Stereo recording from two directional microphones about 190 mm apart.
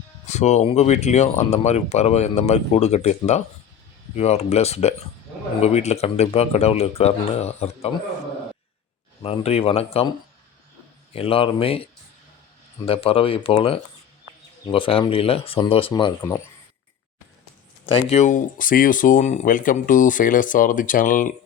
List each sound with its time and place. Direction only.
0.3 s speech: 35° left (ahead or behind)
9.2 s speech: 30° left (ahead or behind)
11.1 s speech: 30° left (ahead or behind)
17.9 s speech: 35° left (ahead or behind)